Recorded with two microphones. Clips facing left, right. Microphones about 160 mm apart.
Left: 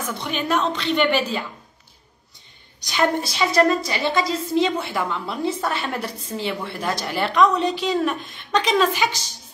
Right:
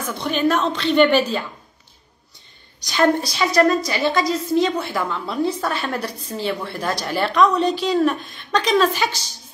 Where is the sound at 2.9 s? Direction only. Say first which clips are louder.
Right 3 dB; 20° left (ahead or behind).